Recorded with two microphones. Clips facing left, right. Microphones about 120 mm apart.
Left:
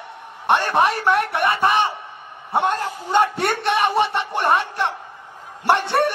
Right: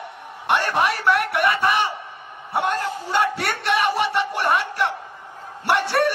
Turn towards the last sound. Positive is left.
turn(degrees=25)  # may be behind; listen again after turning